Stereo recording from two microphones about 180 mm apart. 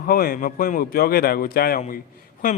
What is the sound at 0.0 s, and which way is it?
Speech, 55° left (ahead or behind).